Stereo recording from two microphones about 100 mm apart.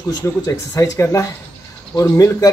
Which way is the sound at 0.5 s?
30° left (ahead or behind).